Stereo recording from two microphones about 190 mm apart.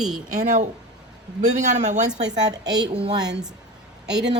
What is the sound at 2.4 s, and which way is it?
Speech, 20° right (ahead or behind).